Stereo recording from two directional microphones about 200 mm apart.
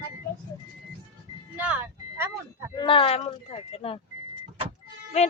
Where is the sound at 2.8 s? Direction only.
25° left (ahead or behind).